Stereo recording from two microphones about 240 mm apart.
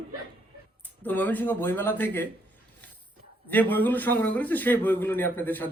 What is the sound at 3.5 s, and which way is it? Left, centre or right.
A man's voice, centre.